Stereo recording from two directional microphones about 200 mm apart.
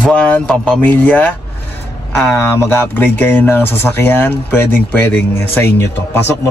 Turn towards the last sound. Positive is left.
turn(degrees=10)  # may be behind; listen again after turning